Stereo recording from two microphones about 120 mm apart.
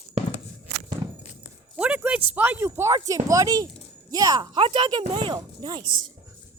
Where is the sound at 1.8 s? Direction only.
10° right (ahead or behind); by 5.8 s 40° right (ahead or behind).